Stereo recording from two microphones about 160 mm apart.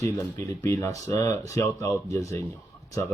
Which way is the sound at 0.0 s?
15° left (ahead or behind).